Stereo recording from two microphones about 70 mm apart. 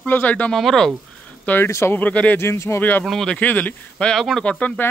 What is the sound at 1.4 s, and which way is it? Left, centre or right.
Speech, left.